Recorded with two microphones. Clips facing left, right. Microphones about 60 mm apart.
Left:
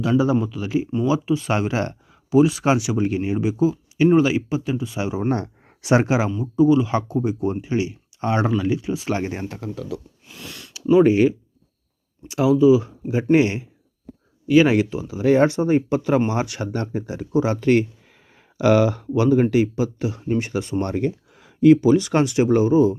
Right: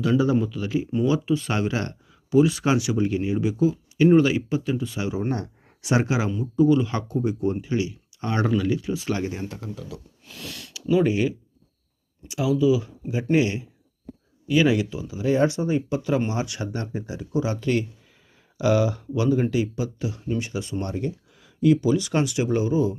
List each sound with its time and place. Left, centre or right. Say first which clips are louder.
0.0 s speech: left 2 dB; left
5.3 s a sound: left 5 dB; left
5.9 s speech: left 5 dB; left
6.4 s speech: left 2 dB; centre
7.6 s speech: left 3 dB; left
10.3 s speech: even; centre
10.8 s speech: left 6 dB; left
18.5 s speech: left 5 dB; left
20.9 s a sound: left 6 dB; left
21.8 s speech: left 5 dB; left